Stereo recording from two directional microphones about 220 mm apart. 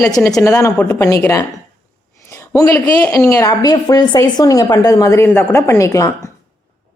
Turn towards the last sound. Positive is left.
turn(degrees=15)  # may be behind; listen again after turning